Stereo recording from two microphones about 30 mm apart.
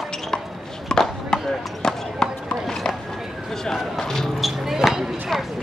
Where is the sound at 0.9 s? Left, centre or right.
Left.